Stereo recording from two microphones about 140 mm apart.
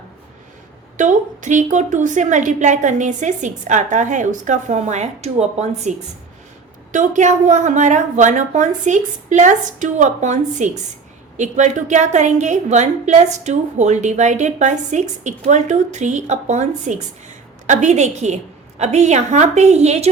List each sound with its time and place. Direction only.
0.9 s a woman's voice: 60° right (ahead or behind)
6.9 s a woman's voice: 60° right (ahead or behind)